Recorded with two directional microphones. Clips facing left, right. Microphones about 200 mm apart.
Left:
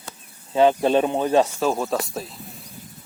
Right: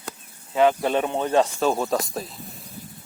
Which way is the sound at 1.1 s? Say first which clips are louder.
Left 2 dB; 10° left (ahead or behind).